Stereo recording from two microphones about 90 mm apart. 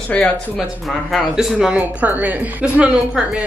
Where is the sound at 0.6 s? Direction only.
Centre (ahead or behind).